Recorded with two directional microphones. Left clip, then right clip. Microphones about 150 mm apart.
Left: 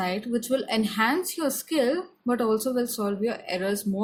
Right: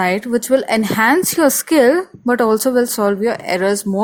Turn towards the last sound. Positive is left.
turn(degrees=-60)  # may be behind; listen again after turning